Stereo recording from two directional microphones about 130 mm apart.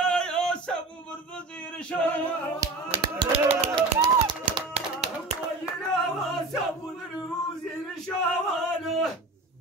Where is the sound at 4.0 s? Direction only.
35° right (ahead or behind).